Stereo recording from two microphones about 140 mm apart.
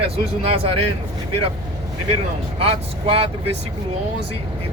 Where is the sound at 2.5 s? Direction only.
45° right (ahead or behind).